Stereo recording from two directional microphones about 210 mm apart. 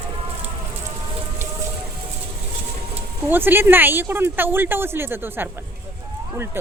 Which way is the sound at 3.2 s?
10° right (ahead or behind).